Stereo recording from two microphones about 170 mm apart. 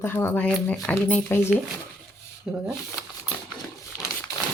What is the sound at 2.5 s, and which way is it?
Speech, 5° right (ahead or behind).